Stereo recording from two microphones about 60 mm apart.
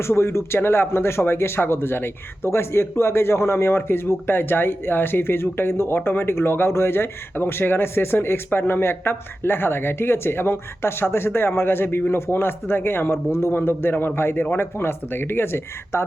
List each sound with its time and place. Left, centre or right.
0.0 s speech: left